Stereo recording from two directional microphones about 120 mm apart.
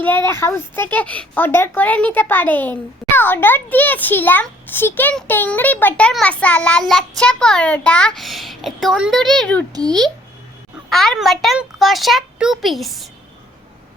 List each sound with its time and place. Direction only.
0.0 s speech: 20° left (ahead or behind); by 9.6 s centre (ahead or behind)
9.7 s a child's voice: 35° right (ahead or behind)
10.8 s a child's voice: 5° left (ahead or behind)